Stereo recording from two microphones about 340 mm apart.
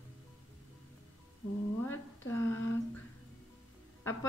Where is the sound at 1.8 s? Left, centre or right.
Centre.